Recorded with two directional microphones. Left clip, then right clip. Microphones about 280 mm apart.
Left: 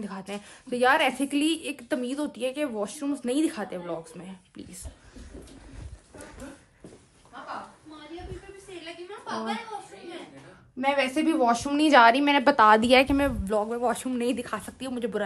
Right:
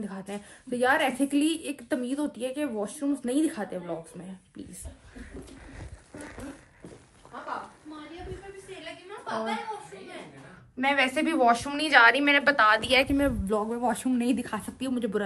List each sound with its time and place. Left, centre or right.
0.0 s a woman's voice: centre
10.8 s a woman's voice: centre
13.1 s a woman's voice: centre